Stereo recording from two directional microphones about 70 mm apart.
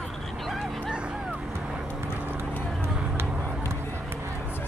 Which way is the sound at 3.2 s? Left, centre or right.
Right.